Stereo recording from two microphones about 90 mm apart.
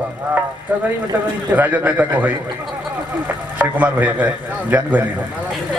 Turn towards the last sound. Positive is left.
turn(degrees=-15)  # may be behind; listen again after turning